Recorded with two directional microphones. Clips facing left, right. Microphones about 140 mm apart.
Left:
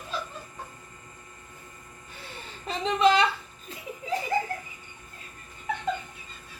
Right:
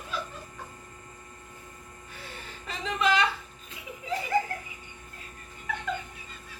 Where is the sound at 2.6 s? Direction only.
30° left (ahead or behind).